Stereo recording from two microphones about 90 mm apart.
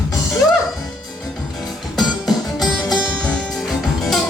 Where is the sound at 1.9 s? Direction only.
Centre (ahead or behind).